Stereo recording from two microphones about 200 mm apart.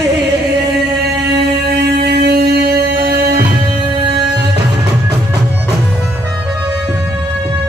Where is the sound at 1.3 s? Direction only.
55° right (ahead or behind).